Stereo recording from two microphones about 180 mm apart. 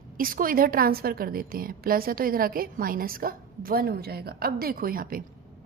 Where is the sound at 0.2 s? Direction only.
50° right (ahead or behind).